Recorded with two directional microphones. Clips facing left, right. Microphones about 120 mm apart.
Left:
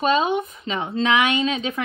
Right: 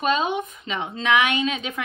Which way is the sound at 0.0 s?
35° left (ahead or behind).